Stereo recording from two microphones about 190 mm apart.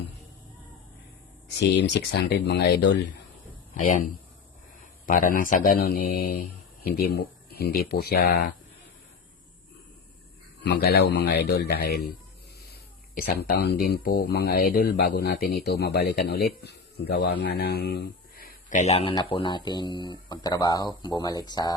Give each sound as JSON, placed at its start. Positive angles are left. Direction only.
{"t": 1.7, "sound": "speech", "side_deg": 60}
{"t": 3.8, "sound": "speech", "side_deg": 40}
{"t": 10.7, "sound": "speech", "side_deg": 55}
{"t": 13.1, "sound": "speech", "side_deg": 55}